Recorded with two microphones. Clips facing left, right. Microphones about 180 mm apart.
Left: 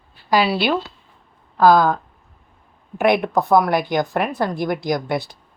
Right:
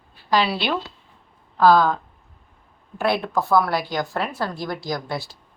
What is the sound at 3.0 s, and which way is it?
Speech, 15° left (ahead or behind).